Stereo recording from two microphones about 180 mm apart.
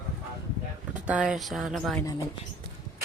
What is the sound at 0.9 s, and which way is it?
Speech, 5° right (ahead or behind).